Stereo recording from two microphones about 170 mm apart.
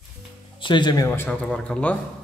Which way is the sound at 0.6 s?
25° left (ahead or behind).